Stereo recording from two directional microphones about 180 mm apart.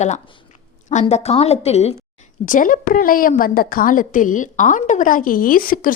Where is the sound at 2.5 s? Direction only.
45° left (ahead or behind).